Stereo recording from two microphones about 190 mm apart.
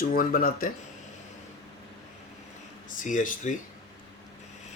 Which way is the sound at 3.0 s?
45° left (ahead or behind).